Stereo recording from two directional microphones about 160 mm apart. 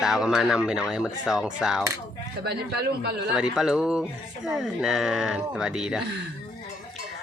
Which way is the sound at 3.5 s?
5° right (ahead or behind).